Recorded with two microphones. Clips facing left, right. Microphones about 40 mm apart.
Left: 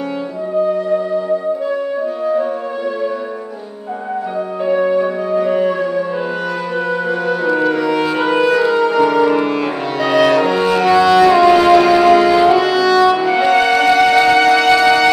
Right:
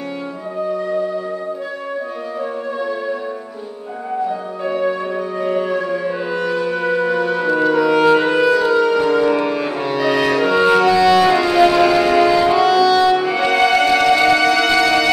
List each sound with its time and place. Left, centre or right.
4.6 s music: centre
7.1 s music: centre
10.5 s music: centre
11.1 s music: centre
12.4 s music: centre
12.6 s music: centre